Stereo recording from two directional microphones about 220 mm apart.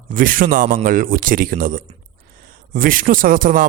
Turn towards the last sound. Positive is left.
turn(degrees=-40)  # may be behind; listen again after turning